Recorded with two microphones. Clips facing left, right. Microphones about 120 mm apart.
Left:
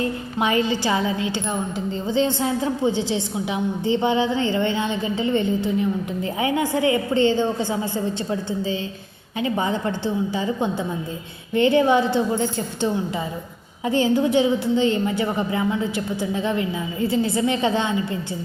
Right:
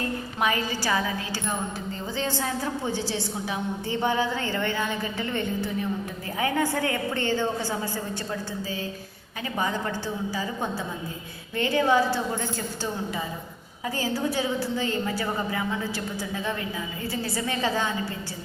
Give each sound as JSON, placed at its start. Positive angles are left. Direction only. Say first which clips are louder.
{"t": 0.3, "sound": "a woman's voice", "louder": "left 6 dB", "side_deg": 25}